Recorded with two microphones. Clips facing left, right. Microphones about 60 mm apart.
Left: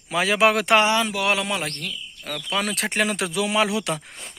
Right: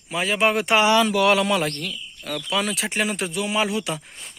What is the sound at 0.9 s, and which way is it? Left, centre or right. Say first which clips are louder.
Speech: right 4 dB; left.